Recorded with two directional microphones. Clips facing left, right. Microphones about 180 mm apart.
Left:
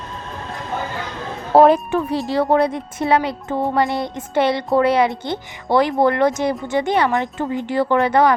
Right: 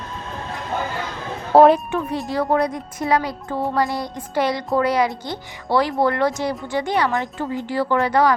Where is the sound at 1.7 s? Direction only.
35° left (ahead or behind).